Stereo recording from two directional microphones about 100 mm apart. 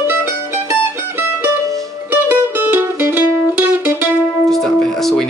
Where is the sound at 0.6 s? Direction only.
25° right (ahead or behind).